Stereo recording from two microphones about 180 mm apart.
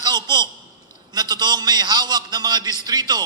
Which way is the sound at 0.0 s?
20° right (ahead or behind).